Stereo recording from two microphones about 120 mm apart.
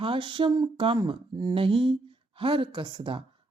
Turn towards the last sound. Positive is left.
turn(degrees=-40)  # may be behind; listen again after turning